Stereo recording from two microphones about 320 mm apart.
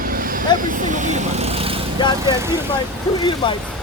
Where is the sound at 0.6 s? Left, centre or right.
Right.